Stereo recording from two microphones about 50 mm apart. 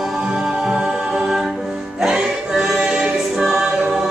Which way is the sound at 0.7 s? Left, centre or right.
Centre.